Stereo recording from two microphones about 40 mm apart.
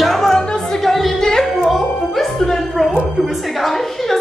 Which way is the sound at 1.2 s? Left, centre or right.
Centre.